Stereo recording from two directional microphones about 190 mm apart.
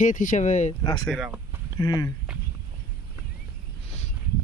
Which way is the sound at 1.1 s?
5° right (ahead or behind).